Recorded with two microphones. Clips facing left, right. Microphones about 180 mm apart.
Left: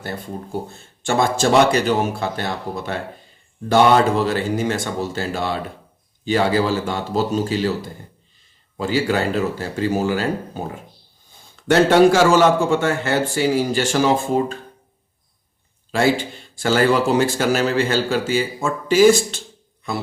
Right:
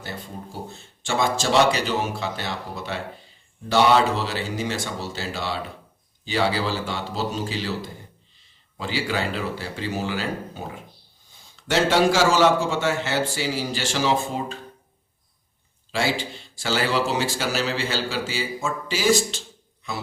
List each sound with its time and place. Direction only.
0.5 s a man's voice: 55° left (ahead or behind)
8.8 s a man's voice: 45° left (ahead or behind)
15.9 s a man's voice: 50° left (ahead or behind)